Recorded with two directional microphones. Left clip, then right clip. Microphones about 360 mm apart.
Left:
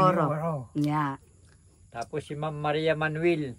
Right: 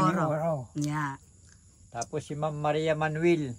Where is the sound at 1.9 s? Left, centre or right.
Centre.